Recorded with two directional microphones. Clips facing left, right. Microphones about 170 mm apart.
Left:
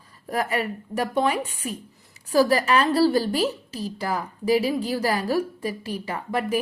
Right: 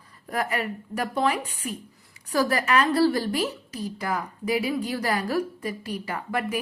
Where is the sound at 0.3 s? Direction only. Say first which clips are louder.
Left 2 dB; 30° left (ahead or behind).